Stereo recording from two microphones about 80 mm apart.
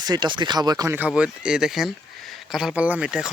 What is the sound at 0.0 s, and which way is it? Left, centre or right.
Speech, right.